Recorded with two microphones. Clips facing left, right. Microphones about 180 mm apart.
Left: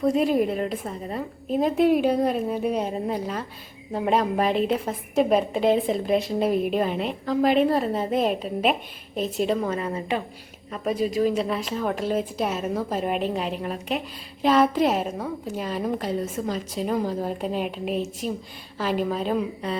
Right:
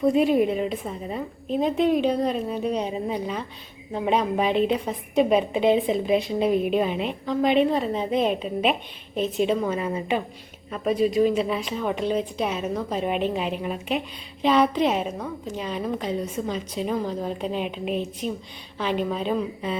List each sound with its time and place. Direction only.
0.2 s a woman's voice: centre (ahead or behind)